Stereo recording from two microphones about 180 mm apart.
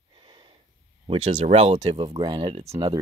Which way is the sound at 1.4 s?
40° right (ahead or behind).